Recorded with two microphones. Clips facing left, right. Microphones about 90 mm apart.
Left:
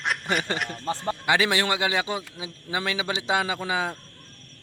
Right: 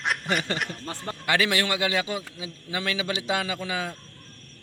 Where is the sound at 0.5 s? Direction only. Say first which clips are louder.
Left 1 dB; centre (ahead or behind).